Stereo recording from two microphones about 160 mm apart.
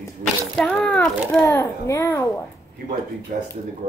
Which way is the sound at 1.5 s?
15° left (ahead or behind).